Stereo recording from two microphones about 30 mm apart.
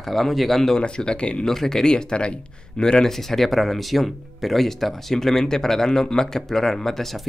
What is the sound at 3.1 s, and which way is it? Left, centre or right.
Speech, centre.